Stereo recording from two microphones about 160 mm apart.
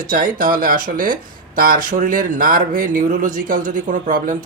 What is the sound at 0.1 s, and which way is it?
Speech, 60° right (ahead or behind).